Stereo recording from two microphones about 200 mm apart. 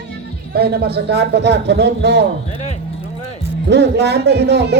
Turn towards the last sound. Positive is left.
turn(degrees=-55)  # may be behind; listen again after turning